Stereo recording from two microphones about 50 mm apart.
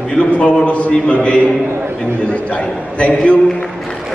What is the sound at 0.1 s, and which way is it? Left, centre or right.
A man's voice, left.